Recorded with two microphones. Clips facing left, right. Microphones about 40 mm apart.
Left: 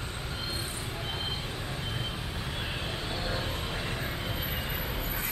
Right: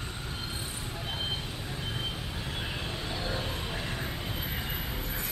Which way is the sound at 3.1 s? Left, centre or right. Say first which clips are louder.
Even; centre.